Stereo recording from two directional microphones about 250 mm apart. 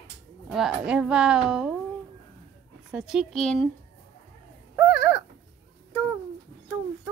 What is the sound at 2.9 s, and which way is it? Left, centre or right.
Speech, centre.